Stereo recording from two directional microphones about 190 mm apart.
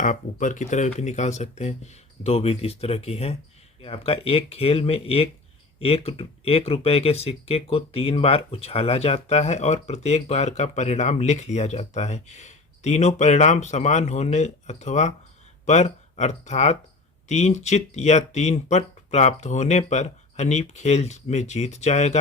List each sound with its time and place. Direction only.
0.0 s speech: 45° left (ahead or behind)